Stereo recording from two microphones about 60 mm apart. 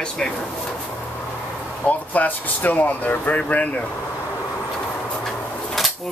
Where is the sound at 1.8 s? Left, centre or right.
Left.